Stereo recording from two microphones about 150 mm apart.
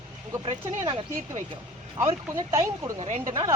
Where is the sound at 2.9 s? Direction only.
50° right (ahead or behind).